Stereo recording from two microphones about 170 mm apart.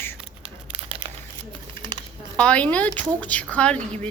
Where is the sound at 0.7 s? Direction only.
35° right (ahead or behind).